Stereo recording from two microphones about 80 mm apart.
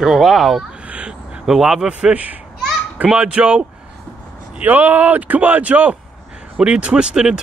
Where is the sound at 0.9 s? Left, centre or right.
Centre.